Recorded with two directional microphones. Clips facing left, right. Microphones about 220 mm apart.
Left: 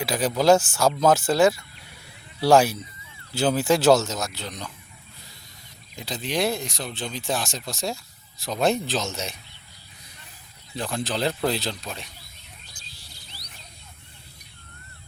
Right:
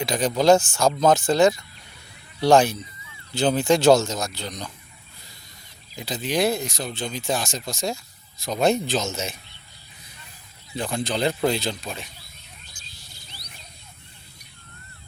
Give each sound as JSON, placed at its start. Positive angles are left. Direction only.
{"t": 0.0, "sound": "speech", "side_deg": 5}
{"t": 6.0, "sound": "speech", "side_deg": 0}
{"t": 10.8, "sound": "speech", "side_deg": 0}
{"t": 12.8, "sound": "a sound", "side_deg": 35}